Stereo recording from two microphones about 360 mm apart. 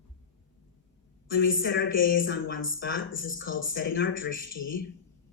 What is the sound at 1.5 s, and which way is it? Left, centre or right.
Speech, left.